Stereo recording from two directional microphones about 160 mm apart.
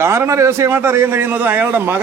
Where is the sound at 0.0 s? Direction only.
15° right (ahead or behind).